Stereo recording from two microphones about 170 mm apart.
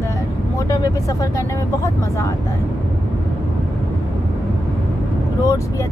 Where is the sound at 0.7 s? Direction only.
20° left (ahead or behind).